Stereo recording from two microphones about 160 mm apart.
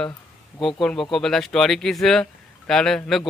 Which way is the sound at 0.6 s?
Centre (ahead or behind).